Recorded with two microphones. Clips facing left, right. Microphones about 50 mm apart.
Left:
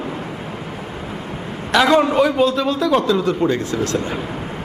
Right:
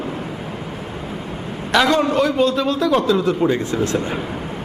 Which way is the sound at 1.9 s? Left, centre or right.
Centre.